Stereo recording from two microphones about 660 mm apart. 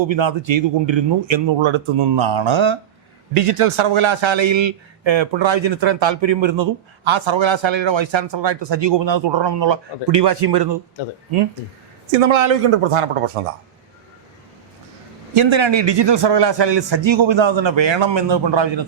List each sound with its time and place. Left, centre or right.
0.1 s a man's voice: right
12.2 s a man's voice: right
15.4 s a man's voice: right